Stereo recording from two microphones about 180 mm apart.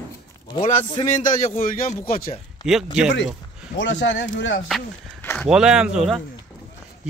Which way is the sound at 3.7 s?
90° left.